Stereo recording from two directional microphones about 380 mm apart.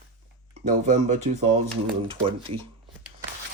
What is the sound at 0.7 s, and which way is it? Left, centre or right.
Speech, centre.